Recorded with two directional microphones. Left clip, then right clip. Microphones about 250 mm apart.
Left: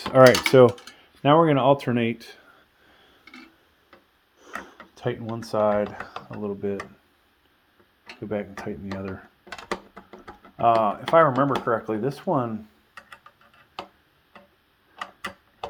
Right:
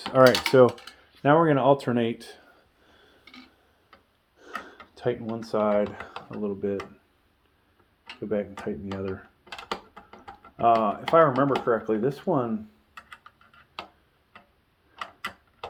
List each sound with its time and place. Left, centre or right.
0.1 s speech: left
4.4 s speech: left
8.3 s speech: left
9.9 s a sound: centre
10.6 s speech: left